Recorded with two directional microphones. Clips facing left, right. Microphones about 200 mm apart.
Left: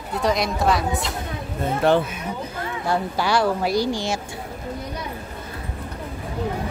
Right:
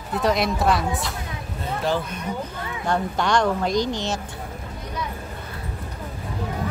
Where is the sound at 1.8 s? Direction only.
60° left (ahead or behind).